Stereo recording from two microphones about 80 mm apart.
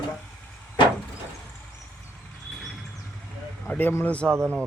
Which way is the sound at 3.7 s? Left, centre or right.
Left.